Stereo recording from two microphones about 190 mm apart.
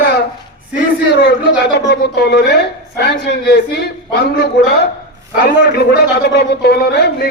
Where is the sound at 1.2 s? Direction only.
60° left (ahead or behind).